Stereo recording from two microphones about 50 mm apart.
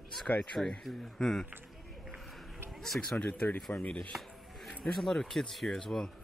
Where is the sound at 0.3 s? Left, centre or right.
Left.